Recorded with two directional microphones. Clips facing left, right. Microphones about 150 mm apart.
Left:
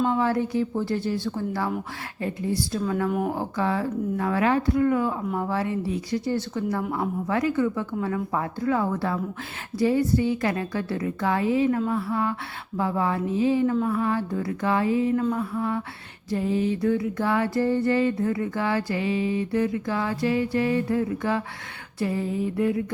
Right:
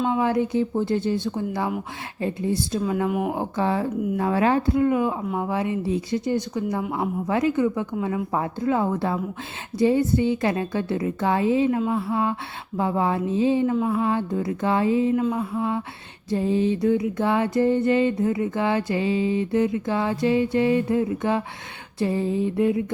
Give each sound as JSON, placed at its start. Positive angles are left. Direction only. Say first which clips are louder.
{"t": 0.1, "sound": "music", "louder": "right 2 dB", "side_deg": -20}
{"t": 2.2, "sound": "speech", "louder": "right 2 dB", "side_deg": -25}
{"t": 3.3, "sound": "music", "louder": "right 2 dB", "side_deg": -25}
{"t": 5.3, "sound": "speech", "louder": "right 1 dB", "side_deg": -15}
{"t": 7.3, "sound": "music", "louder": "right 2 dB", "side_deg": -20}
{"t": 15.1, "sound": "music", "louder": "right 1 dB", "side_deg": -15}